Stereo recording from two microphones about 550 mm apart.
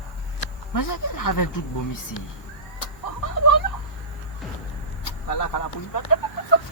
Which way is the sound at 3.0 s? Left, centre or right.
Left.